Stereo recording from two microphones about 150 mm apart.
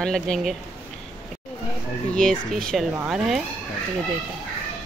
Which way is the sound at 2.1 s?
5° left (ahead or behind).